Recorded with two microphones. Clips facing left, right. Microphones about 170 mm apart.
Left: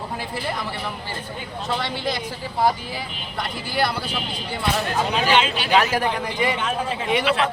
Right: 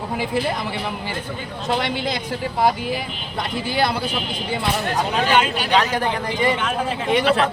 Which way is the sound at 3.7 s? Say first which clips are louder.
Right 2 dB; 20° right (ahead or behind).